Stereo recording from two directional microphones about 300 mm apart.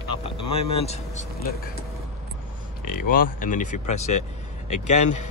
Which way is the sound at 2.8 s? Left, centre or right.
Left.